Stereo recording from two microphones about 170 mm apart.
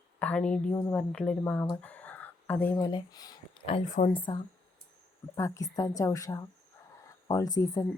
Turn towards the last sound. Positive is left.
turn(degrees=20)  # may be behind; listen again after turning